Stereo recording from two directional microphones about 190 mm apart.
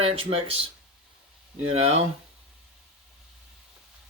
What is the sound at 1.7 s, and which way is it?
Speech, 35° right (ahead or behind).